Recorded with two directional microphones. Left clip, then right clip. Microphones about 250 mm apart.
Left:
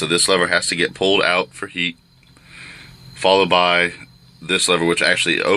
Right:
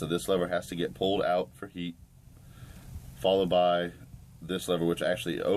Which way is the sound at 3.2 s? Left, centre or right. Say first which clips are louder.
Left 10 dB; centre.